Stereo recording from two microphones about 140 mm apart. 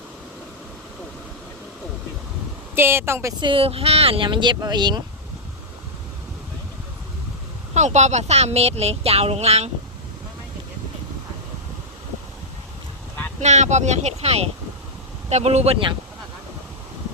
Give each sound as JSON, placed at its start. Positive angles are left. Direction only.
{"t": 2.7, "sound": "speech", "side_deg": -15}
{"t": 3.4, "sound": "speech", "side_deg": -40}
{"t": 7.7, "sound": "speech", "side_deg": -55}
{"t": 13.4, "sound": "speech", "side_deg": -55}